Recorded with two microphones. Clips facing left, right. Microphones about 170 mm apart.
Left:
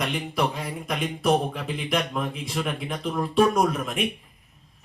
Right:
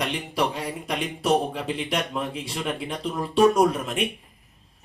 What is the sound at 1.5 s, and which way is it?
Speech, 30° right (ahead or behind).